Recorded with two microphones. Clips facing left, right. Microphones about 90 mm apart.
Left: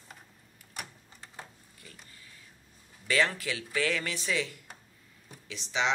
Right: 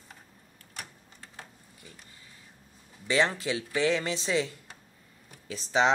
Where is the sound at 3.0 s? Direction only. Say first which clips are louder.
Right 2 dB; 25° right (ahead or behind); by 5.9 s 40° right (ahead or behind).